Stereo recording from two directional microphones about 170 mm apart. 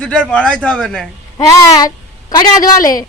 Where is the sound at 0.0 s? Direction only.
5° left (ahead or behind).